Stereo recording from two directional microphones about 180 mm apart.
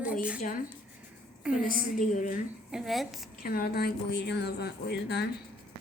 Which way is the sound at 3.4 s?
60° left (ahead or behind).